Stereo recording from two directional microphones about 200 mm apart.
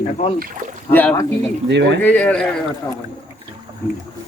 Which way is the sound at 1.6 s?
60° right (ahead or behind).